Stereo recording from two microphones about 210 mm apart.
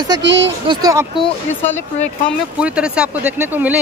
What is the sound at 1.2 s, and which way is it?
Speech, 10° left (ahead or behind).